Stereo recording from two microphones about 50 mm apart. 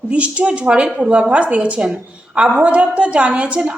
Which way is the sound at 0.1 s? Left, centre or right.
Right.